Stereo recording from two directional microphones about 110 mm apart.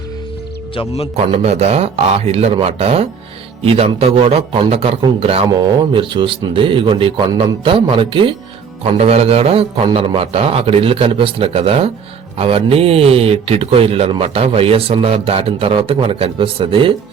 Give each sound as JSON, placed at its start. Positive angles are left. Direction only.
{"t": 0.7, "sound": "speech", "side_deg": 60}
{"t": 1.1, "sound": "speech", "side_deg": -70}
{"t": 5.5, "sound": "speech", "side_deg": -50}
{"t": 8.8, "sound": "speech", "side_deg": -70}